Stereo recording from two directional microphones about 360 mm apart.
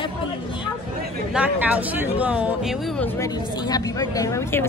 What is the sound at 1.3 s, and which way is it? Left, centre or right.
Speech, centre.